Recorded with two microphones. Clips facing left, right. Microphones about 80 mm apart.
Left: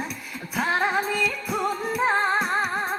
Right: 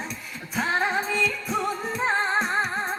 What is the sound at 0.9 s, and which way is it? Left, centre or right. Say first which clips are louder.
Music: left 1 dB; left.